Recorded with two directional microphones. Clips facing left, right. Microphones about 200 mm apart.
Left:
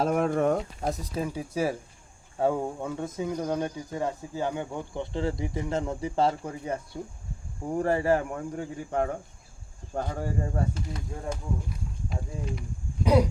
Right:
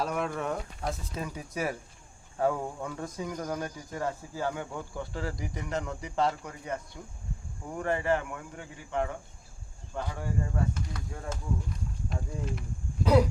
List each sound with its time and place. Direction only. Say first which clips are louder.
0.0 s speech: left 7 dB; 45° left (ahead or behind)
12.0 s speech: left 1 dB; centre (ahead or behind)